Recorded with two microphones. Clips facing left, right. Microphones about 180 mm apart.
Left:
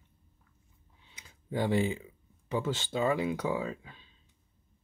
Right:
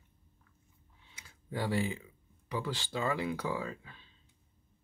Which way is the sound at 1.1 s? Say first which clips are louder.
Left 5 dB; 20° left (ahead or behind).